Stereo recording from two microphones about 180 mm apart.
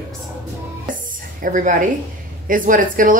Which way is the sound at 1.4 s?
45° right (ahead or behind).